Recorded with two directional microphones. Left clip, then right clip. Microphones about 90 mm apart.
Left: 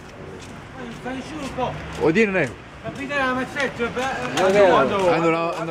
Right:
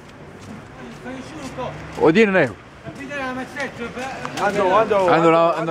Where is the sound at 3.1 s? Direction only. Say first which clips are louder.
Left 5 dB; 10° left (ahead or behind).